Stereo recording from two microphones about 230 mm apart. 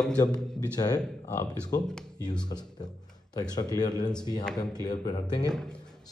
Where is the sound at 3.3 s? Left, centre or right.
Centre.